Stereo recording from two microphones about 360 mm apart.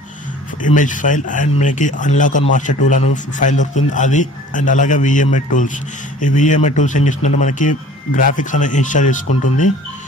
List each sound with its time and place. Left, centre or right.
0.7 s a man's voice: left